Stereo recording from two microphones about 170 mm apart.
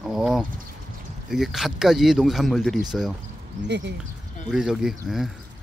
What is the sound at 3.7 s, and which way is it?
Speech, 90° right.